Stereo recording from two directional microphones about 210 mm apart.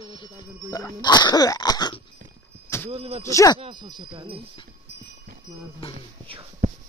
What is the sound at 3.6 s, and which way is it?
Speech, 20° right (ahead or behind).